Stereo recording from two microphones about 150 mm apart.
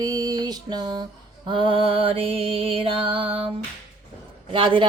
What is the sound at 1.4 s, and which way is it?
Music, 35° right (ahead or behind).